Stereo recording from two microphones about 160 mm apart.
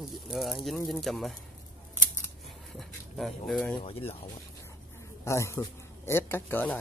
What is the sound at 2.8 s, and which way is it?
Speech, centre (ahead or behind).